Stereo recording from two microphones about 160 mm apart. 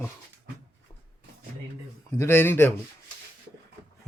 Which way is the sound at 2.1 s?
15° left (ahead or behind).